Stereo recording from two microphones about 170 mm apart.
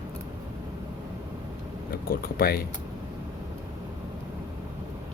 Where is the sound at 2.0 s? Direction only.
60° left (ahead or behind).